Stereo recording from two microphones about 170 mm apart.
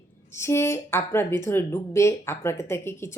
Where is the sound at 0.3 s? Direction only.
15° left (ahead or behind).